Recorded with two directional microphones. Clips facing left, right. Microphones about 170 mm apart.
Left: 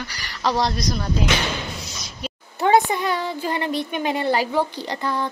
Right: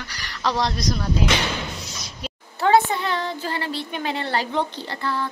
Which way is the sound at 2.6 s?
15° left (ahead or behind).